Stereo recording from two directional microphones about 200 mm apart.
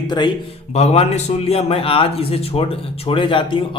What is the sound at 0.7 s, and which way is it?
Speech, 30° left (ahead or behind).